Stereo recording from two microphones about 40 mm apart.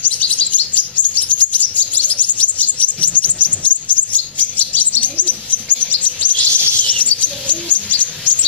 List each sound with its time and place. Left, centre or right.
0.3 s chirp: left
5.2 s a sound: left
5.8 s chirp: left